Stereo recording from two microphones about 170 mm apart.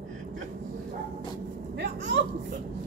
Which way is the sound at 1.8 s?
90° right.